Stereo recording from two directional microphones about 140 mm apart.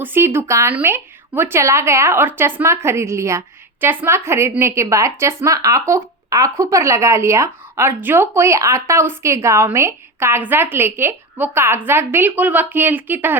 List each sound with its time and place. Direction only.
0.0 s a woman's voice: 15° right (ahead or behind)